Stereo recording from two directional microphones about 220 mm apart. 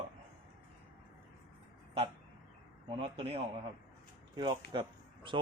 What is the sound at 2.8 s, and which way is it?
A man's voice, 25° right (ahead or behind).